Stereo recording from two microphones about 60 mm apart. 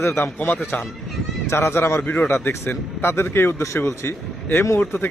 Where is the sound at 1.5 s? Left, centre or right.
Left.